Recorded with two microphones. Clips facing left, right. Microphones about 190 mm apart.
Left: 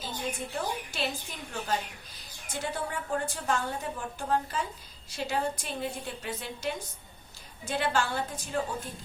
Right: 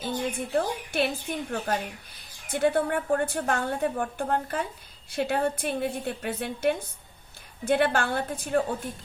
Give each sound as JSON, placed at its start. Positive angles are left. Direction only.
{"t": 0.3, "sound": "a woman's voice", "side_deg": -55}